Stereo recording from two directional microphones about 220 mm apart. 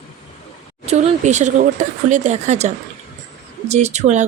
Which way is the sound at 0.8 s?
30° right (ahead or behind).